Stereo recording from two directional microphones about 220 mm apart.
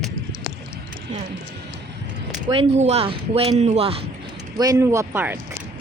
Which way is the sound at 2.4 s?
25° right (ahead or behind).